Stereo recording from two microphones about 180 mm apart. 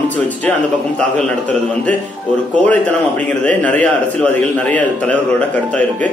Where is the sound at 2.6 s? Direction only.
10° left (ahead or behind).